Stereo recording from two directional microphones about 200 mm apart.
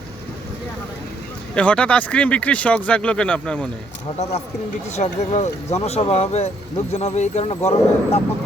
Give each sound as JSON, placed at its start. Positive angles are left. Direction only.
{"t": 1.5, "sound": "speech", "side_deg": 5}
{"t": 4.2, "sound": "speech", "side_deg": 30}